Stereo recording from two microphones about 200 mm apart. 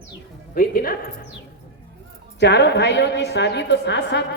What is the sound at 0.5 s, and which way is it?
Speech, 45° left (ahead or behind).